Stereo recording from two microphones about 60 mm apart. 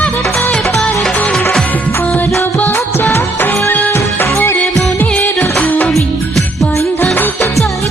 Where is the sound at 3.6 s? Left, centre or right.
Left.